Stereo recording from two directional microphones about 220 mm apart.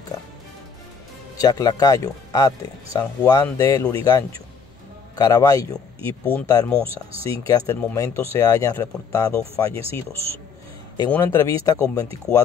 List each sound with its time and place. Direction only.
1.4 s speech: 15° left (ahead or behind)
9.8 s speech: 25° right (ahead or behind)
11.1 s speech: 10° left (ahead or behind)